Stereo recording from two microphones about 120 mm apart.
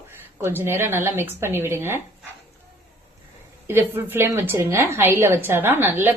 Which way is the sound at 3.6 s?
20° right (ahead or behind).